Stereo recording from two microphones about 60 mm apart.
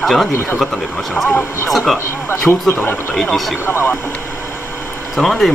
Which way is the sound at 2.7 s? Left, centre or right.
Left.